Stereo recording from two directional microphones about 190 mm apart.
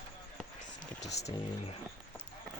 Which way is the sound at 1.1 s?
35° left (ahead or behind).